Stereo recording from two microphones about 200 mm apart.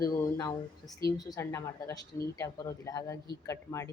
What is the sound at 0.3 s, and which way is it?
Speech, 20° left (ahead or behind).